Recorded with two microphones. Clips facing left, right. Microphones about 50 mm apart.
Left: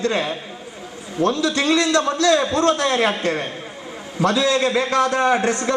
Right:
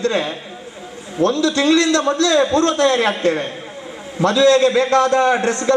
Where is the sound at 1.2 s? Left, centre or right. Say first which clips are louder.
Right 3 dB; left.